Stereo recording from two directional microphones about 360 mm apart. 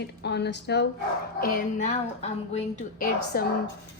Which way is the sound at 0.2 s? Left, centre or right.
Left.